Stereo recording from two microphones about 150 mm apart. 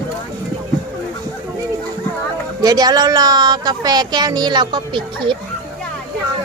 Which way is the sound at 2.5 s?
25° right (ahead or behind).